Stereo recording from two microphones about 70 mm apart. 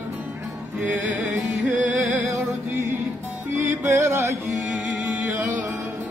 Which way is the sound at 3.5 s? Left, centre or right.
Right.